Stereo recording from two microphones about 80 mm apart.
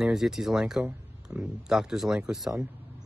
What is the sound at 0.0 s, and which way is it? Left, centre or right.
Speech, centre.